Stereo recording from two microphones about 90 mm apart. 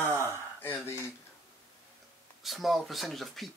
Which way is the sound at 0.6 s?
30° left (ahead or behind).